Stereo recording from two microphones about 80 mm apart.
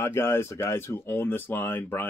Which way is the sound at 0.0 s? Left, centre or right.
Left.